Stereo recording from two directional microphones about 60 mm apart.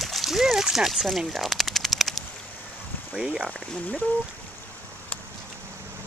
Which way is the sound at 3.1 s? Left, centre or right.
Centre.